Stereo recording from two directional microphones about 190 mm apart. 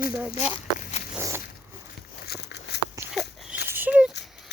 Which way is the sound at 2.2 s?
60° left (ahead or behind).